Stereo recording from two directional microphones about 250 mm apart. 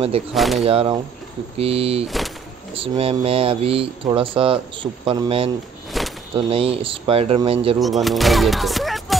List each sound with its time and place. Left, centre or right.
0.3 s speech: centre
0.7 s speech: right
2.0 s speech: centre
2.7 s speech: right
5.9 s a sound: centre
6.3 s speech: right
7.8 s speech: centre